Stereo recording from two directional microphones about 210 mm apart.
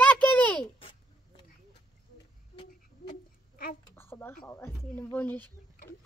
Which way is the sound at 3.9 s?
10° left (ahead or behind).